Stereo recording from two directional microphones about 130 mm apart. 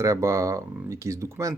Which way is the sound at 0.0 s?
25° right (ahead or behind).